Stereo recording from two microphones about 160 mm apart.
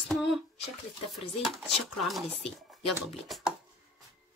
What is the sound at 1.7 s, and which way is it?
Speech, centre (ahead or behind).